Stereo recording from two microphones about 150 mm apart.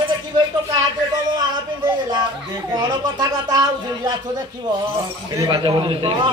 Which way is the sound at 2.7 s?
25° right (ahead or behind).